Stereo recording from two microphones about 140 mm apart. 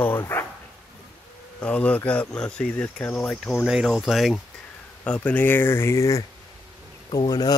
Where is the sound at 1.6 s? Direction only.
10° left (ahead or behind).